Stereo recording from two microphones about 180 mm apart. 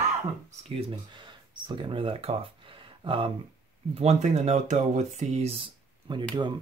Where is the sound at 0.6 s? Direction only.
35° right (ahead or behind).